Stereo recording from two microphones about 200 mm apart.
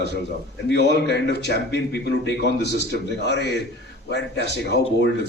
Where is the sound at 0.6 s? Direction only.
60° left (ahead or behind).